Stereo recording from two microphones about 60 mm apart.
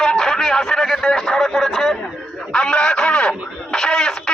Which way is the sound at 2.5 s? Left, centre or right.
Centre.